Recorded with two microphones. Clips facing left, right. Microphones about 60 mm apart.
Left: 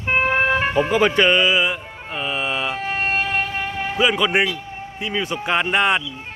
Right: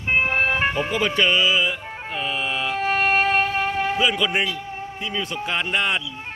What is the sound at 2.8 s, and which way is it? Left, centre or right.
Music, right.